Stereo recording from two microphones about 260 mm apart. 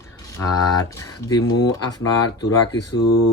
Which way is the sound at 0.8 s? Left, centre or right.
Centre.